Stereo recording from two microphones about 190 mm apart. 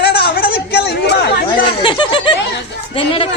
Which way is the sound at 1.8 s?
25° left (ahead or behind).